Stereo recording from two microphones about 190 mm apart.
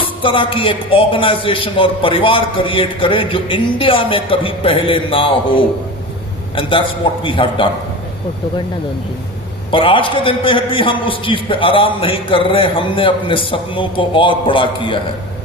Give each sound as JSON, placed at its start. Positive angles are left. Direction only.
{"t": 0.2, "sound": "a man's voice", "side_deg": 30}
{"t": 9.7, "sound": "a man's voice", "side_deg": 25}